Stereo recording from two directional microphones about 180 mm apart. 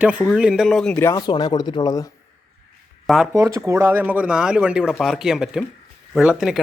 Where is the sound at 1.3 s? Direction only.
25° left (ahead or behind).